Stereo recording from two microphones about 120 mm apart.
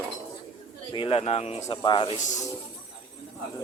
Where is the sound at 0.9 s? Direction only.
50° left (ahead or behind).